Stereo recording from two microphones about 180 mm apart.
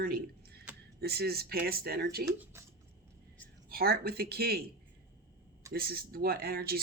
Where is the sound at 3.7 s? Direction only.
60° right (ahead or behind).